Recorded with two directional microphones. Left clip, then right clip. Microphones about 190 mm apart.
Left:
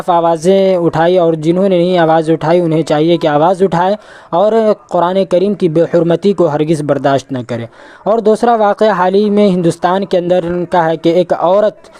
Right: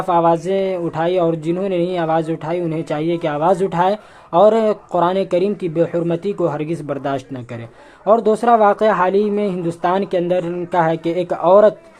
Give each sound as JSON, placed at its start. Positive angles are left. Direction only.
{"t": 0.1, "sound": "speech", "side_deg": 50}